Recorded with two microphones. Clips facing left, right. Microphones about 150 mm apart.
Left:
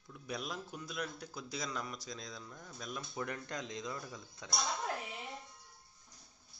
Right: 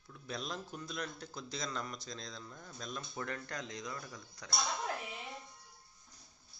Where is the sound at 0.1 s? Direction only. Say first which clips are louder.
Even; 10° left (ahead or behind).